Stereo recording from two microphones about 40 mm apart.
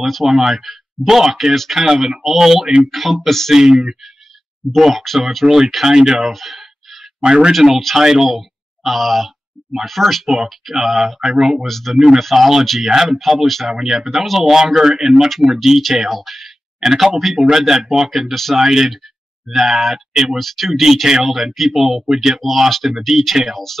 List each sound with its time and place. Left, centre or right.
0.0 s speech: centre
4.7 s speech: centre
5.9 s speech: centre
6.3 s a sound: centre
7.2 s speech: right
7.9 s speech: centre
11.1 s speech: centre
11.6 s speech: centre
16.8 s speech: centre
18.3 s speech: centre
18.6 s speech: centre
20.3 s speech: centre
20.8 s speech: centre